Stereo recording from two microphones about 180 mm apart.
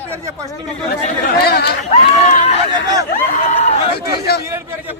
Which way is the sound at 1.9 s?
40° left (ahead or behind).